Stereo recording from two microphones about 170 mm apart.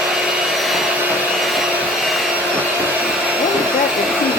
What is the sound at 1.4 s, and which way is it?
Wood, centre (ahead or behind).